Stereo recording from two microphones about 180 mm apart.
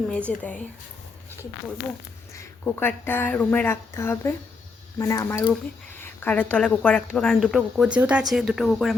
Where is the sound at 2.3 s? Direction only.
10° left (ahead or behind).